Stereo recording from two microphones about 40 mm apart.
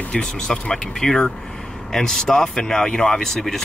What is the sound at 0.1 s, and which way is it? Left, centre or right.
Speech, centre.